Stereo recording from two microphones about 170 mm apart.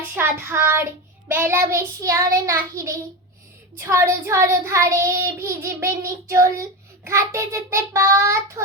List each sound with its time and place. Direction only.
0.1 s child singing: 15° right (ahead or behind)